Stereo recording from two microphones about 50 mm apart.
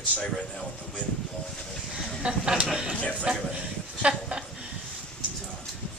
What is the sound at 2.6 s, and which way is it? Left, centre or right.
Speech, centre.